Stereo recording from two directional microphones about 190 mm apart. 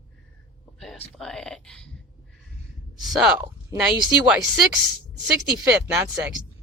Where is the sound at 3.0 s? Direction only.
Centre (ahead or behind).